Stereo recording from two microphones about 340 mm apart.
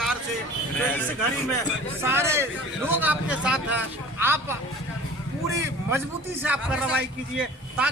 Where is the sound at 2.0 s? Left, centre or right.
Centre.